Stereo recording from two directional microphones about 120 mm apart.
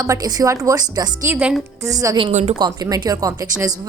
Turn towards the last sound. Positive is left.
turn(degrees=-30)  # may be behind; listen again after turning